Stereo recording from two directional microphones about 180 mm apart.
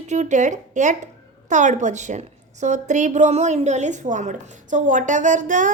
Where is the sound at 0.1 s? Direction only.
40° right (ahead or behind).